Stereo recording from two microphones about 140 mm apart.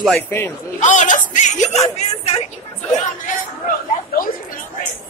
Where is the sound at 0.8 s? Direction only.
60° left (ahead or behind).